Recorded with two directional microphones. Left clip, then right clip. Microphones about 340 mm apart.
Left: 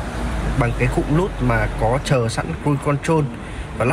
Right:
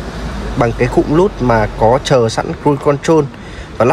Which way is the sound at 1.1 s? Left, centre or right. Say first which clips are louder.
Right 9 dB; right.